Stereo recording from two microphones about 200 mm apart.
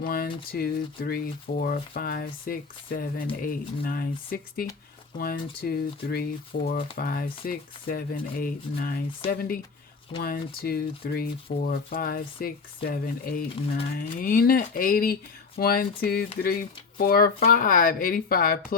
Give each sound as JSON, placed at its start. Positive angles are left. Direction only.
{"t": 0.0, "sound": "speech", "side_deg": 50}